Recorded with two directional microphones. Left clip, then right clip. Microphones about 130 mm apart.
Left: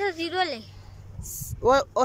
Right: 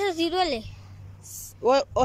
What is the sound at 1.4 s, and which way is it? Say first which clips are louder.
Speech: left 1 dB; 5° right (ahead or behind).